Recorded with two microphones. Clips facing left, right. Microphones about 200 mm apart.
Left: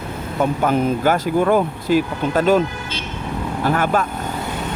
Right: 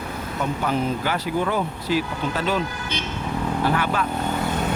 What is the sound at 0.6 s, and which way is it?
Speech, 50° left (ahead or behind).